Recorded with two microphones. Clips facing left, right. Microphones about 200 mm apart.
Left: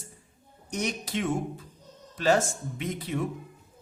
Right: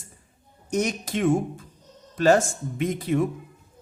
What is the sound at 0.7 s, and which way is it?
Speech, 45° right (ahead or behind).